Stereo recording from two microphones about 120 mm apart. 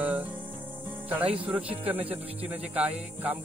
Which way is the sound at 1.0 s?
15° right (ahead or behind).